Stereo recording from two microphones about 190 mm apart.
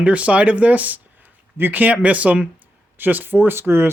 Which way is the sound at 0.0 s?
5° right (ahead or behind).